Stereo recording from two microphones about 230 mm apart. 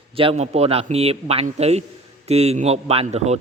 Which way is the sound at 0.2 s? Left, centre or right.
Right.